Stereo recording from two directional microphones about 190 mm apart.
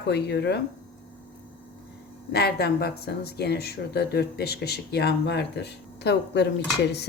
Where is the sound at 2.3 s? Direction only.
55° left (ahead or behind).